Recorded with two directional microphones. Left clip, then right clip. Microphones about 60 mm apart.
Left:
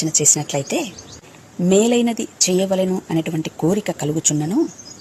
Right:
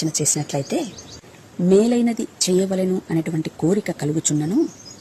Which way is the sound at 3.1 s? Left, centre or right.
Right.